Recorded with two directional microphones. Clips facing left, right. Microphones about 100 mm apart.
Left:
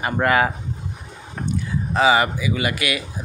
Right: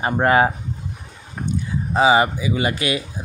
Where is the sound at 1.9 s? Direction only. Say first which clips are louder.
Right 2 dB; 20° right (ahead or behind).